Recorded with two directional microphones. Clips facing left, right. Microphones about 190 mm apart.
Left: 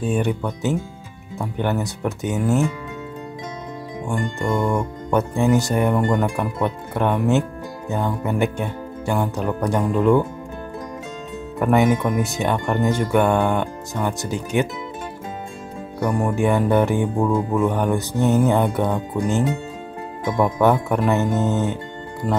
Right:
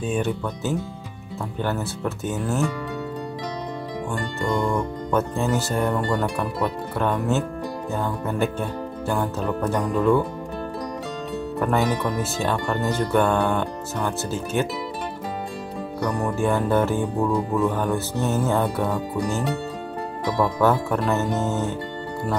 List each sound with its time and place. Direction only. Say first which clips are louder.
0.0 s music: left 3 dB; 10° left (ahead or behind)
4.1 s music: left 3 dB; 15° left (ahead or behind)
11.6 s music: left 6 dB; 15° left (ahead or behind)
16.0 s music: left 4 dB; 10° left (ahead or behind)